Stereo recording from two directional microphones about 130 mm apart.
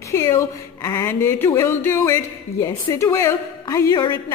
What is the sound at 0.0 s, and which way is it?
Speech, 20° left (ahead or behind).